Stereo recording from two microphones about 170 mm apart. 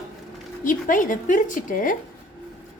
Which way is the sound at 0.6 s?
55° left (ahead or behind).